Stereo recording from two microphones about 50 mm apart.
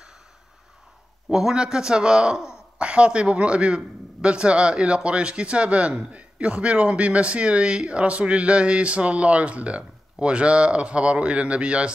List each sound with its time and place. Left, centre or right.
1.3 s a man's voice: centre